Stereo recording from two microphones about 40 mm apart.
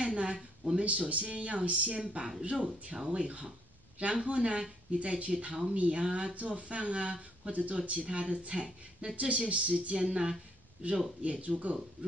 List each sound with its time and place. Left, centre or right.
0.0 s speech: right
6.3 s speech: right
11.2 s speech: right